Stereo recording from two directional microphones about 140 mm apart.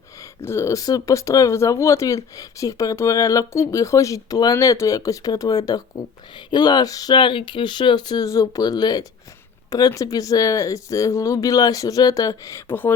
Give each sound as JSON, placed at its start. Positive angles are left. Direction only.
{"t": 0.4, "sound": "speech", "side_deg": 20}